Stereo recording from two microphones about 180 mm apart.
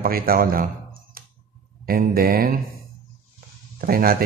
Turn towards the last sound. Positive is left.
turn(degrees=-55)  # may be behind; listen again after turning